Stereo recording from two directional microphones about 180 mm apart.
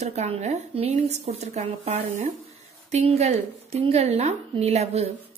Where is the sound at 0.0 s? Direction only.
40° right (ahead or behind).